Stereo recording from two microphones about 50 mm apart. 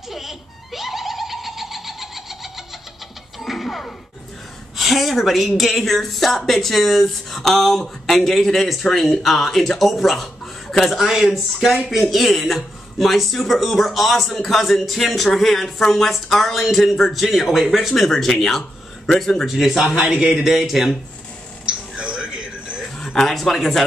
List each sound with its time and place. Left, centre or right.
0.1 s baby laughter: centre
3.3 s music: centre
4.7 s speech: centre
11.0 s speech: centre
21.6 s a sound: centre
23.1 s speech: centre